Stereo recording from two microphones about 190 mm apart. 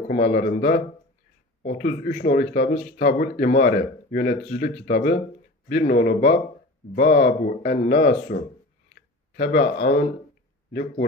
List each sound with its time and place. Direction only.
0.1 s speech: 55° left (ahead or behind)
2.5 s speech: 60° left (ahead or behind)